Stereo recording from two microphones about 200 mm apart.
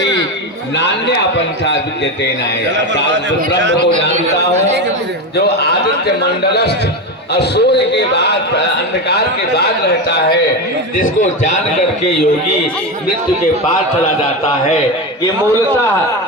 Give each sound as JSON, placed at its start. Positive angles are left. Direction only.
{"t": 6.4, "sound": "a man's voice", "side_deg": 55}
{"t": 10.1, "sound": "a man's voice", "side_deg": 55}
{"t": 11.0, "sound": "speech", "side_deg": 40}